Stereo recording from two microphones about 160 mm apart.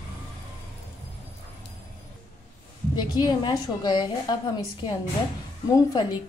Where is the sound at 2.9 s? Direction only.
25° left (ahead or behind).